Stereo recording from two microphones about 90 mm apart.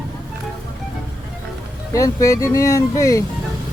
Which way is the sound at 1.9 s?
40° left (ahead or behind).